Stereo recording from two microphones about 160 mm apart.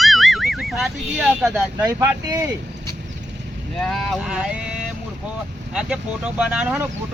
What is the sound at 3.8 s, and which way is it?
Speech, centre (ahead or behind).